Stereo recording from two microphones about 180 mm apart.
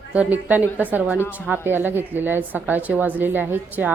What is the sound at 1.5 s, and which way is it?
A woman's voice, 10° right (ahead or behind).